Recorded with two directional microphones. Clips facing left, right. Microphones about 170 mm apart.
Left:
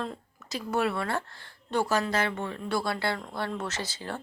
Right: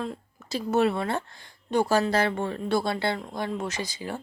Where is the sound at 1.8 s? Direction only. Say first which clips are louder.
Right 4 dB; 30° right (ahead or behind).